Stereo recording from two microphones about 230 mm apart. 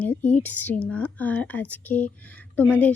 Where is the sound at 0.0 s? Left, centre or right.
Centre.